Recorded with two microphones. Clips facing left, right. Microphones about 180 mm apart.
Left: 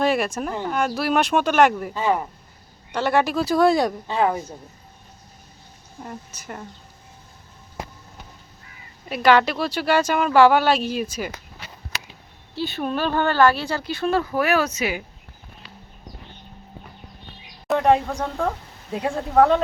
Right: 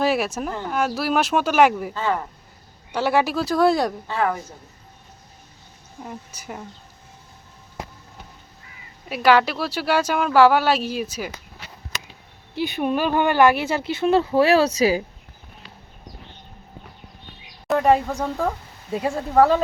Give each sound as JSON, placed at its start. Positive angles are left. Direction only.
{"t": 0.0, "sound": "speech", "side_deg": -5}
{"t": 1.9, "sound": "speech", "side_deg": 15}
{"t": 2.9, "sound": "speech", "side_deg": -5}
{"t": 4.0, "sound": "speech", "side_deg": 20}
{"t": 6.0, "sound": "speech", "side_deg": -5}
{"t": 9.0, "sound": "speech", "side_deg": -5}
{"t": 12.5, "sound": "speech", "side_deg": -15}
{"t": 17.7, "sound": "speech", "side_deg": 0}